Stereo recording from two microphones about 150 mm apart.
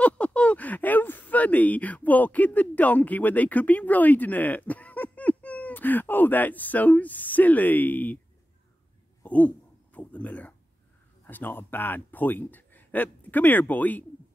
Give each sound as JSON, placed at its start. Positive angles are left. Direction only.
{"t": 0.0, "sound": "speech", "side_deg": 10}
{"t": 9.2, "sound": "a sound", "side_deg": 10}
{"t": 9.9, "sound": "a man's voice", "side_deg": 10}